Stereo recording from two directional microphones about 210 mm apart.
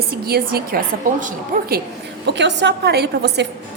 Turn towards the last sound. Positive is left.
turn(degrees=-50)  # may be behind; listen again after turning